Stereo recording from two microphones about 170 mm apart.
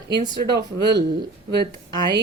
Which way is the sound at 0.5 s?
80° right.